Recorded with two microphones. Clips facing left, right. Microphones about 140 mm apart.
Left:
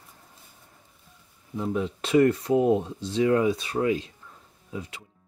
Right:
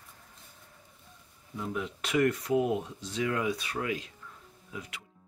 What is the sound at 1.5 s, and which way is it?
Speech, 30° left (ahead or behind).